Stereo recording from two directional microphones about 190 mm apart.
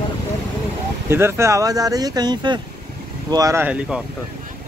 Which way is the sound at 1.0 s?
15° right (ahead or behind).